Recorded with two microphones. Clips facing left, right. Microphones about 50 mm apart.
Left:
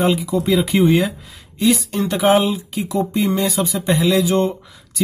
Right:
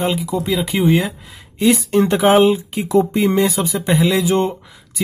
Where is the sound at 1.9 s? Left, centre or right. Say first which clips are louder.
Right 3 dB; right.